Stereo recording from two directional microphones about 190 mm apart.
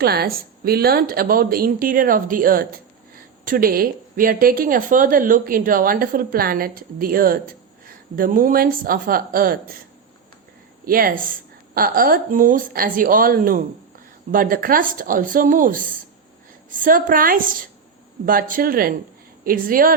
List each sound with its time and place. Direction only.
0.0 s speech: 55° right (ahead or behind)
10.8 s speech: 50° right (ahead or behind)